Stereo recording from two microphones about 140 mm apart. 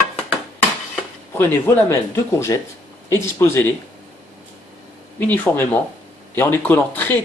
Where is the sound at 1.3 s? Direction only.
15° left (ahead or behind).